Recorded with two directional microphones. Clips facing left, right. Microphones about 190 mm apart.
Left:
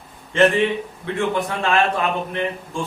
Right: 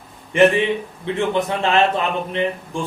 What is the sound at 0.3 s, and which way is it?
A man's voice, 15° right (ahead or behind).